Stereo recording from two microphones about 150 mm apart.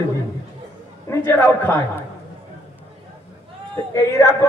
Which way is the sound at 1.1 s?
15° left (ahead or behind).